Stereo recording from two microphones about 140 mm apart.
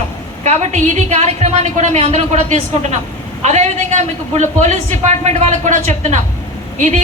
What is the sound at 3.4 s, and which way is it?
A man's voice, 55° right (ahead or behind).